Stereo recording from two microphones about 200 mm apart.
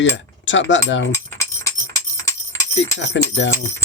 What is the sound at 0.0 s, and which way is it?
Speech, 70° left (ahead or behind).